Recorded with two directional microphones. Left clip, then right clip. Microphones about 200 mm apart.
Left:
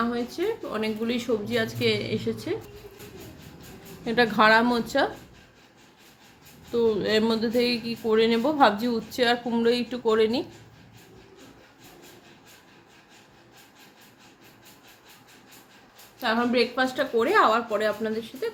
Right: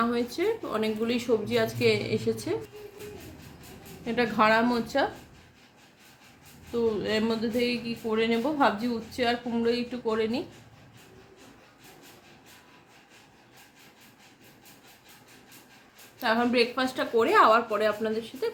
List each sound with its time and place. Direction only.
0.1 s speech: 10° right (ahead or behind)
4.0 s speech: 20° left (ahead or behind)
6.7 s speech: 25° left (ahead or behind)
16.2 s speech: centre (ahead or behind)